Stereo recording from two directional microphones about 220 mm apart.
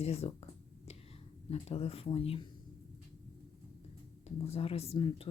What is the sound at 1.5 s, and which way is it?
Speech, 30° left (ahead or behind).